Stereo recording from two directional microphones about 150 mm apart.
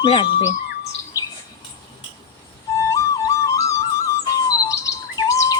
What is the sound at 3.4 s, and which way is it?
Music, 20° left (ahead or behind).